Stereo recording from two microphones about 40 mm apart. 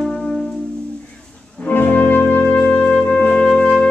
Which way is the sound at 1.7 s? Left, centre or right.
Left.